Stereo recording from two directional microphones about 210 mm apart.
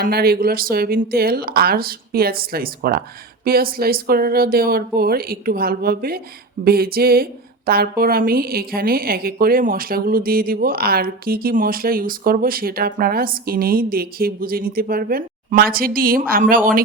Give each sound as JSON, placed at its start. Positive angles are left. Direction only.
{"t": 0.0, "sound": "speech", "side_deg": -45}